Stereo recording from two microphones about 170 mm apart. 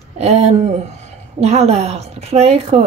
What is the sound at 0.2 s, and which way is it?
A woman's voice, 40° right (ahead or behind).